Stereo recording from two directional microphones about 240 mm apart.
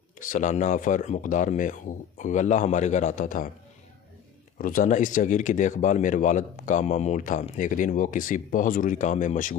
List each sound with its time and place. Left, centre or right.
0.2 s speech: left
4.6 s speech: left